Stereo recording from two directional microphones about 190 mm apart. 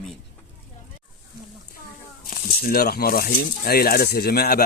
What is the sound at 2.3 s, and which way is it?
Speech, 50° left (ahead or behind).